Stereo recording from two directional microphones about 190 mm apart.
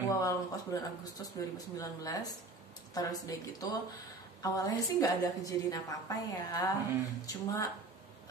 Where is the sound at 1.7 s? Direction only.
20° left (ahead or behind).